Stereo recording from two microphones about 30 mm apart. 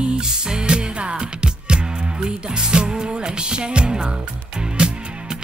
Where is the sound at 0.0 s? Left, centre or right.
Right.